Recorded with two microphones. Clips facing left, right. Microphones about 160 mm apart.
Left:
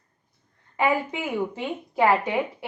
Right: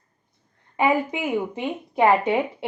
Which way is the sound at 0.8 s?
20° right (ahead or behind).